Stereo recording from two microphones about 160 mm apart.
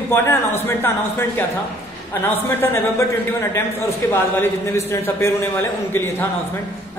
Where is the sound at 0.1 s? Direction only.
15° left (ahead or behind).